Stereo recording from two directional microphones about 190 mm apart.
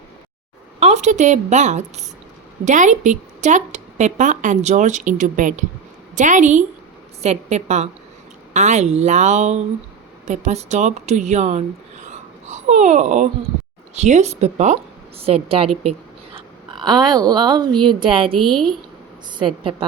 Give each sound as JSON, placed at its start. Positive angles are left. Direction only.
{"t": 0.8, "sound": "a woman's voice", "side_deg": -35}
{"t": 18.3, "sound": "a woman's voice", "side_deg": 0}
{"t": 19.4, "sound": "a woman's voice", "side_deg": -25}